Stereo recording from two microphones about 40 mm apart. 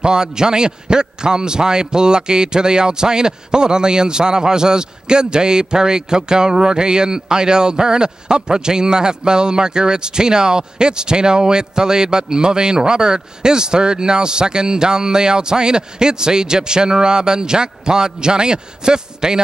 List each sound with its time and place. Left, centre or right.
0.0 s a man's voice: centre